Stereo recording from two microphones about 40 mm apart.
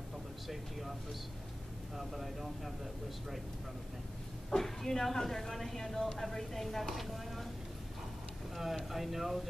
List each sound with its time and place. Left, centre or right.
0.5 s speech: centre
2.0 s speech: centre
4.5 s speech: centre
8.9 s speech: centre